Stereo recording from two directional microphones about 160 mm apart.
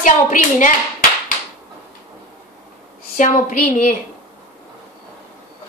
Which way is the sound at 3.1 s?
55° left (ahead or behind).